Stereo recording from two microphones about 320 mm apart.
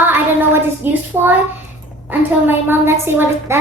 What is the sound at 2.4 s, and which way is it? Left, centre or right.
A woman's voice, centre.